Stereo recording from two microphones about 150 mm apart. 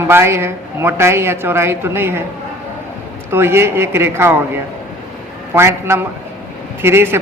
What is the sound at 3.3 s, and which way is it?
A woman's voice, 15° right (ahead or behind).